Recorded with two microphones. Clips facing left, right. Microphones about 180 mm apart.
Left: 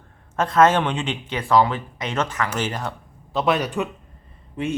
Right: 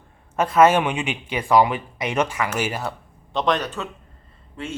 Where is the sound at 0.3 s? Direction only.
10° right (ahead or behind).